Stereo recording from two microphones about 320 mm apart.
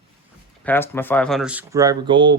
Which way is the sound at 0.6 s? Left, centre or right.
Centre.